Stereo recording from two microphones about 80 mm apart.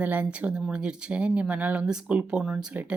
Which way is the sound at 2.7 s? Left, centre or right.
Centre.